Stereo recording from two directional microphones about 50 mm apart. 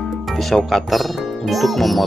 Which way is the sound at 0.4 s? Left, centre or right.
Centre.